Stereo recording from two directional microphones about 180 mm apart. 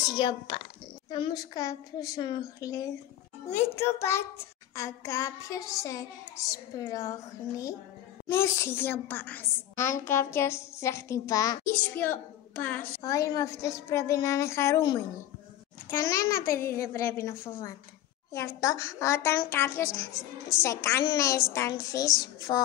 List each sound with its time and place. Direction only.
0.2 s a child's voice: 25° left (ahead or behind)